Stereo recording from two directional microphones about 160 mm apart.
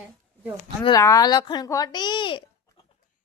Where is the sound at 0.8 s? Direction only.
25° left (ahead or behind).